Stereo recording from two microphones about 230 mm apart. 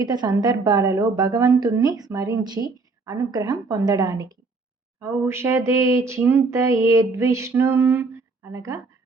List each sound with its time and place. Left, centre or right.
0.0 s a woman's voice: centre